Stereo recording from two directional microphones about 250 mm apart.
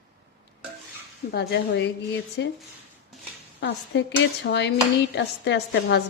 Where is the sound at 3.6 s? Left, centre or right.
Left.